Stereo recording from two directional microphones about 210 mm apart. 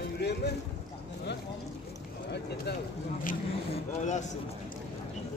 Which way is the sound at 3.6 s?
35° left (ahead or behind).